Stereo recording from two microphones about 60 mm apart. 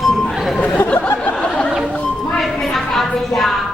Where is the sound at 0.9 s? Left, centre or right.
Left.